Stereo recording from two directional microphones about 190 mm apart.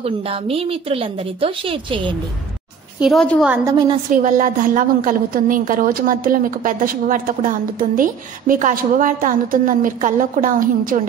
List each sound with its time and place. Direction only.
0.0 s a woman's voice: 30° right (ahead or behind)
3.0 s a woman's voice: centre (ahead or behind)
3.6 s a woman's voice: 20° right (ahead or behind)
4.1 s a woman's voice: 40° right (ahead or behind)